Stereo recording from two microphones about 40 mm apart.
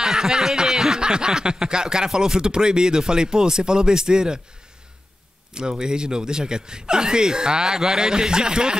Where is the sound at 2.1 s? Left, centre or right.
Centre.